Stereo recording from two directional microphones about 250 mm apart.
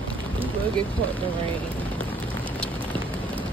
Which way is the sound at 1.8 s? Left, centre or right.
Centre.